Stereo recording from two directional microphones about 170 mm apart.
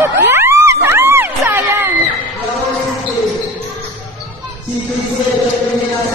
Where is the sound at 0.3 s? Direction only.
15° right (ahead or behind).